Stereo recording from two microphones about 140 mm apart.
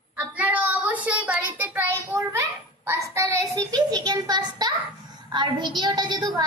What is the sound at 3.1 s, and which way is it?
Child singing, 20° right (ahead or behind).